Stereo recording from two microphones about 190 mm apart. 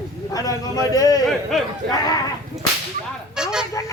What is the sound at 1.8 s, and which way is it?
Speech, 55° right (ahead or behind).